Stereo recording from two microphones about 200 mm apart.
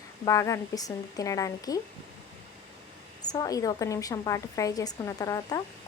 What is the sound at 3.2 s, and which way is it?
A woman's voice, 20° left (ahead or behind).